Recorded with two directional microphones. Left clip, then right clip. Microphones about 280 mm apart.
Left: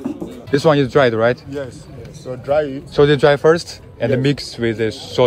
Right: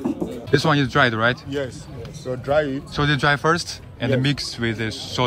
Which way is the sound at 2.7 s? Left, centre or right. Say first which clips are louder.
Left 9 dB; centre.